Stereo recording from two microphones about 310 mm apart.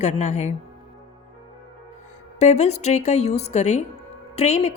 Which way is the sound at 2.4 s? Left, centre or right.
Left.